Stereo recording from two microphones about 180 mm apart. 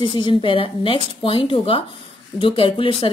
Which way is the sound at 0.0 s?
25° left (ahead or behind).